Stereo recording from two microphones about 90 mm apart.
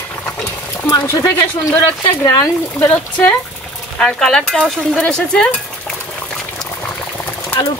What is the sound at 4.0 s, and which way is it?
Speech, 5° left (ahead or behind).